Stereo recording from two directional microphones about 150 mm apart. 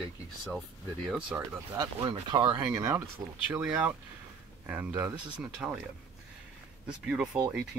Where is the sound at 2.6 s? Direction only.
15° right (ahead or behind).